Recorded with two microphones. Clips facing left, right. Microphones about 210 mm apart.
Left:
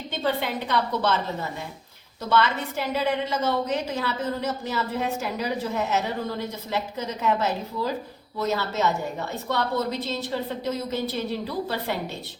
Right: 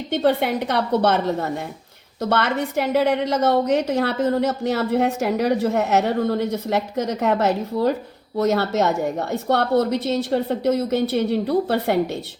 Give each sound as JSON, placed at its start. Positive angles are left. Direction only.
{"t": 0.1, "sound": "a woman's voice", "side_deg": -60}